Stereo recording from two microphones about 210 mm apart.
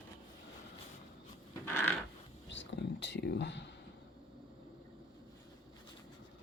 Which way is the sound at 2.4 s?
60° left (ahead or behind).